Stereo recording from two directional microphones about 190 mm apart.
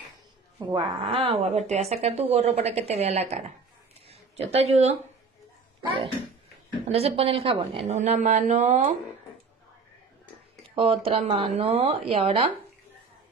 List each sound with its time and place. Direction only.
0.7 s a woman's voice: 25° right (ahead or behind)
6.9 s a woman's voice: 30° right (ahead or behind)
10.7 s a woman's voice: 30° right (ahead or behind)